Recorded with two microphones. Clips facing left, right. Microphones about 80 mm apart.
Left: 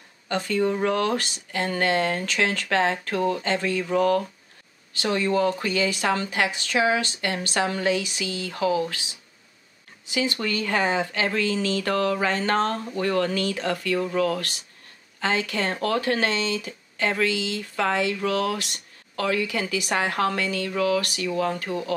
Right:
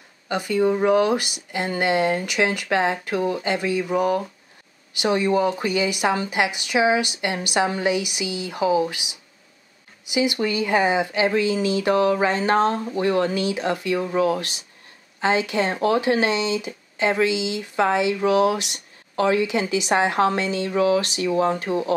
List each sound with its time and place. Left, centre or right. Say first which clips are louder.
0.3 s speech: right 3 dB; centre